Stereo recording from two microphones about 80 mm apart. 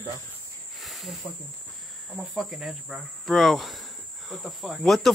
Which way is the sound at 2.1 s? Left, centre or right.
Centre.